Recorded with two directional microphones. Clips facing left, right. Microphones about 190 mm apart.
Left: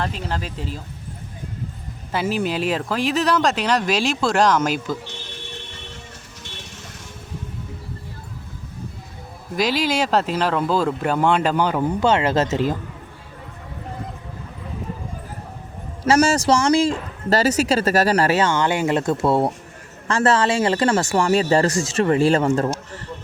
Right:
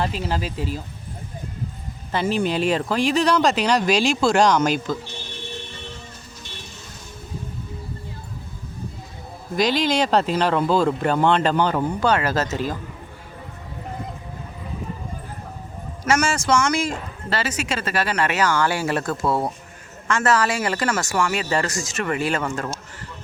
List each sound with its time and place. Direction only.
0.0 s speech: 5° right (ahead or behind)
2.1 s speech: 5° left (ahead or behind)
9.6 s speech: 5° left (ahead or behind); by 12.7 s 25° left (ahead or behind)
16.0 s speech: 35° left (ahead or behind)